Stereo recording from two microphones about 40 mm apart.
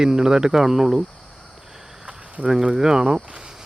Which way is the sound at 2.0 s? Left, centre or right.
Right.